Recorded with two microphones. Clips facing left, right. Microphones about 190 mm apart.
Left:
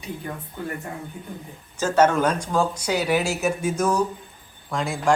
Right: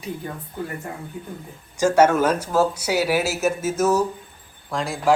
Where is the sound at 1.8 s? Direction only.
10° right (ahead or behind).